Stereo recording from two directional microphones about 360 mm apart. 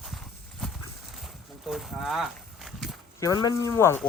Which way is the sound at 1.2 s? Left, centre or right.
Centre.